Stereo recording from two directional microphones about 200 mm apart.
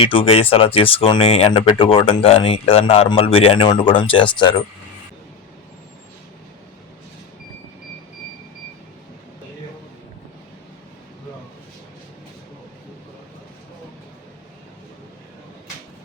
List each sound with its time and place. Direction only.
0.0 s speech: 25° left (ahead or behind)